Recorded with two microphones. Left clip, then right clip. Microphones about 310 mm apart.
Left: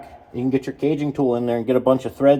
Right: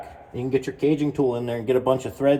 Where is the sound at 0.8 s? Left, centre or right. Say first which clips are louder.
Left 2 dB; left.